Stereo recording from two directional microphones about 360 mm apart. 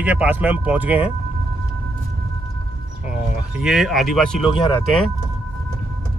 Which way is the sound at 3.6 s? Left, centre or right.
Centre.